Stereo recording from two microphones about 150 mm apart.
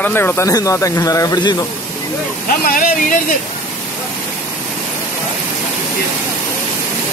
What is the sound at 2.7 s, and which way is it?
Speech, 65° left (ahead or behind).